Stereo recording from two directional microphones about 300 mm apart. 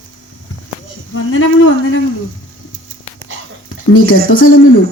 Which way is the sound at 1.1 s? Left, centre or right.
Left.